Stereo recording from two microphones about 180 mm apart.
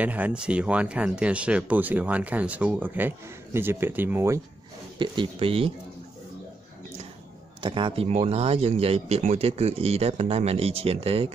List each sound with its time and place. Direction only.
0.0 s speech: 10° right (ahead or behind)
4.9 s speech: 25° right (ahead or behind)
7.6 s speech: 30° right (ahead or behind)